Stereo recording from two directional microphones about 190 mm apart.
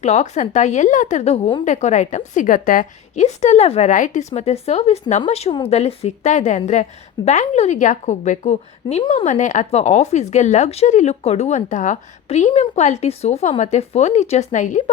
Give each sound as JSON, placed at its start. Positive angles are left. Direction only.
{"t": 0.0, "sound": "a woman's voice", "side_deg": 35}